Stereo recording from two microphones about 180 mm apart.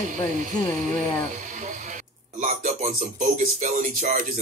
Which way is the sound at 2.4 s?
40° right (ahead or behind).